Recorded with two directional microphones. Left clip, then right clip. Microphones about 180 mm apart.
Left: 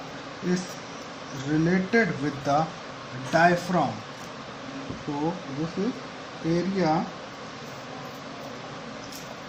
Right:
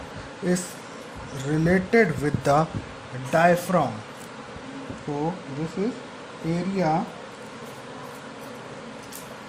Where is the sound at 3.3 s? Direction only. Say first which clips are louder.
Right 2 dB; 45° right (ahead or behind).